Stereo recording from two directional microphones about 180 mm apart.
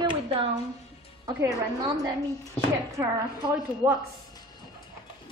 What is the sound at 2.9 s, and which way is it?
A woman's voice, 15° right (ahead or behind).